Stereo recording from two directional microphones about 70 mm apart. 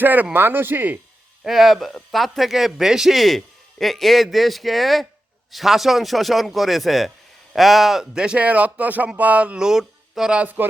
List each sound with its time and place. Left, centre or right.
0.0 s speech: right
1.5 s a man's voice: centre
10.4 s speech: right